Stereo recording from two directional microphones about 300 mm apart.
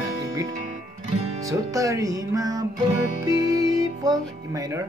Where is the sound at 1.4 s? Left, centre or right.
Centre.